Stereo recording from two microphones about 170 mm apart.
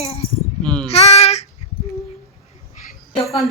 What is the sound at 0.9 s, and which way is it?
Child singing, 40° left (ahead or behind).